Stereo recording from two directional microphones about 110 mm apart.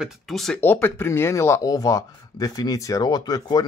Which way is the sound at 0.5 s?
20° left (ahead or behind).